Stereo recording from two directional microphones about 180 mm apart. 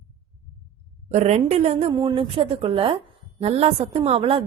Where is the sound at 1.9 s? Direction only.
25° right (ahead or behind).